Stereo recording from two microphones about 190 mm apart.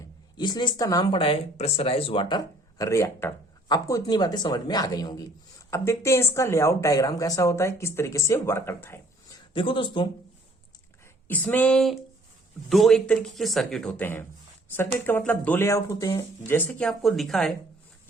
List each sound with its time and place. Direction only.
0.3 s speech: 25° left (ahead or behind)
9.5 s speech: 25° left (ahead or behind)
11.3 s speech: 10° left (ahead or behind)